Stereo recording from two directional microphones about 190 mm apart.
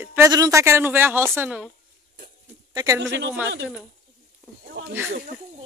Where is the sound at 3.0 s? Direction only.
70° right (ahead or behind).